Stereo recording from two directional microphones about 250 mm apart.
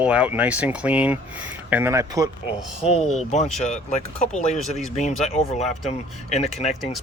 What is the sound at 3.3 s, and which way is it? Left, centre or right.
Speech, left.